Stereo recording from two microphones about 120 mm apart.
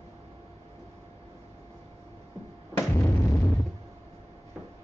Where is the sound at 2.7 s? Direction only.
20° left (ahead or behind).